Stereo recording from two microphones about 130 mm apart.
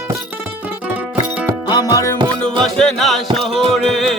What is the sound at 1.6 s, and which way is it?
Music, 30° left (ahead or behind).